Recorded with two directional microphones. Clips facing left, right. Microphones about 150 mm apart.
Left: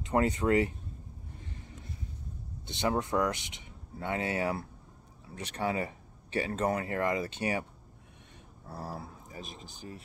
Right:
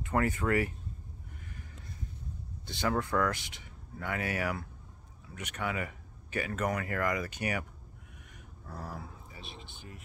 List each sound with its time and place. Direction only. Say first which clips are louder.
0.0 s speech: left 3 dB; 20° left (ahead or behind)
2.6 s speech: left 1 dB; 20° left (ahead or behind)
8.6 s speech: left 2 dB; 30° left (ahead or behind)